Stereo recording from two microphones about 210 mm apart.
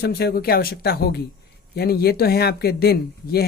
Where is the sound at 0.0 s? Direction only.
50° left (ahead or behind).